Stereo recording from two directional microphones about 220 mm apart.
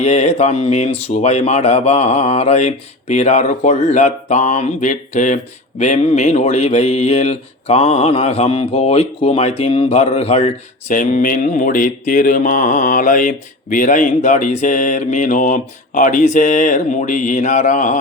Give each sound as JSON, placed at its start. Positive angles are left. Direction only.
{"t": 0.0, "sound": "speech", "side_deg": 30}